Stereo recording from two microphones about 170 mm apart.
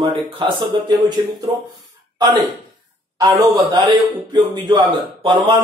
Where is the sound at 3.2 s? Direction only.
20° right (ahead or behind).